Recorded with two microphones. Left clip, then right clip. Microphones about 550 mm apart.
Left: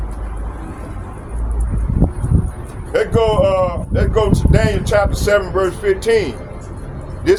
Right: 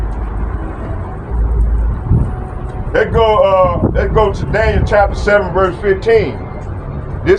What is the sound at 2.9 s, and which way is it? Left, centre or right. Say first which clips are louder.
Speech: right 4 dB; left.